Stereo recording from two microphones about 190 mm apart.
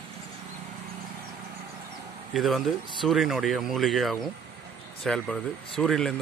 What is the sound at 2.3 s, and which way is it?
Speech, centre (ahead or behind).